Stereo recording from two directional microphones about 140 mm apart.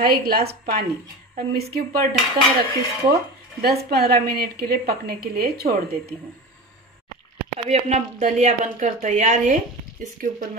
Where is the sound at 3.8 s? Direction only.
90° right.